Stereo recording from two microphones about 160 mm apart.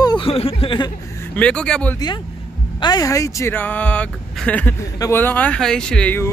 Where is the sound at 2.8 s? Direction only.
25° left (ahead or behind).